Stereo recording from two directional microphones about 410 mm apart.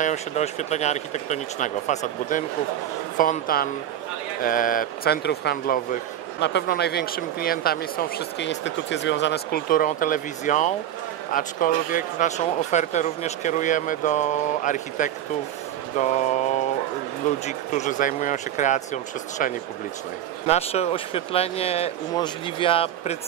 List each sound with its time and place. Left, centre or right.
0.0 s speech: centre
17.5 s speech: centre
20.4 s speech: centre